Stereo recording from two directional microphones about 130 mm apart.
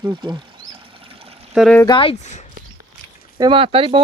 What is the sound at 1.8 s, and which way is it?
Speech, 40° left (ahead or behind).